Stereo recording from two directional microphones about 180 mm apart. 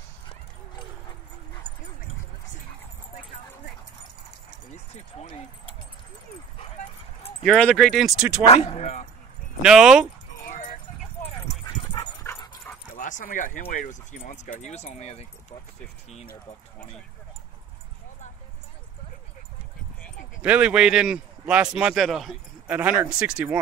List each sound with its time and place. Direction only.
7.4 s speech: centre (ahead or behind)
8.5 s speech: 35° left (ahead or behind)
9.6 s speech: 5° right (ahead or behind)
11.2 s dog: 30° left (ahead or behind)
12.3 s dog: 15° left (ahead or behind)
12.9 s speech: 50° left (ahead or behind)
20.4 s speech: 5° right (ahead or behind)